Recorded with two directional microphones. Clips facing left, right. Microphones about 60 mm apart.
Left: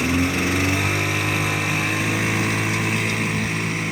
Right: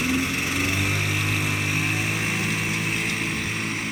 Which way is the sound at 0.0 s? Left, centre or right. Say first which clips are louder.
Left 4 dB; left.